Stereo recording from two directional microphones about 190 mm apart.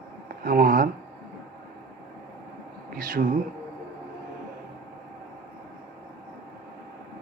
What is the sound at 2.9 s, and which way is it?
Speech, 50° right (ahead or behind).